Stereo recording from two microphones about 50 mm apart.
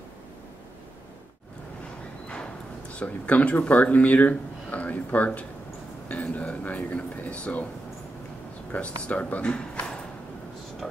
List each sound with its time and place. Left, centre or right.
2.9 s speech: left
8.7 s speech: left
9.5 s a sound: left